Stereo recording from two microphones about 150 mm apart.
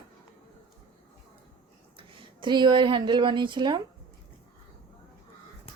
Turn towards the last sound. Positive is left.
turn(degrees=-30)  # may be behind; listen again after turning